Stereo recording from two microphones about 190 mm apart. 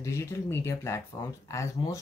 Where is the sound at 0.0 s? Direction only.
15° left (ahead or behind).